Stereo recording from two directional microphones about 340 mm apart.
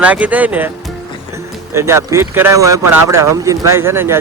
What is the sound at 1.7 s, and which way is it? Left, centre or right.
Speech, centre.